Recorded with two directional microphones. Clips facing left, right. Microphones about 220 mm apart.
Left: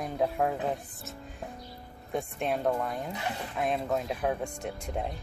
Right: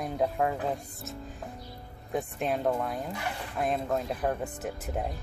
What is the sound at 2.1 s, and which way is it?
Speech, centre (ahead or behind).